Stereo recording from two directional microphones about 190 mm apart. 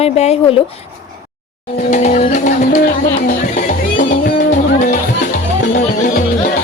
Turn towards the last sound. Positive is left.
turn(degrees=40)  # may be behind; listen again after turning